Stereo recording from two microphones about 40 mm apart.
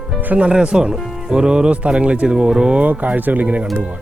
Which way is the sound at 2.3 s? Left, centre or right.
Centre.